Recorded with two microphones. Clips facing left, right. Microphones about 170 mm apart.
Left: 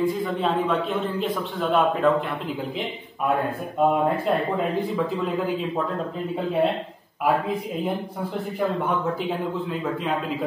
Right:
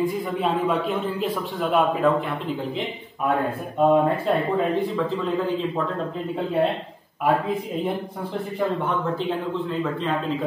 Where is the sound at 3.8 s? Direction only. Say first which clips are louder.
Right 2 dB; centre (ahead or behind).